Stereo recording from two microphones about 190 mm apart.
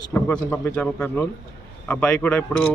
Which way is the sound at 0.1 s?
10° left (ahead or behind).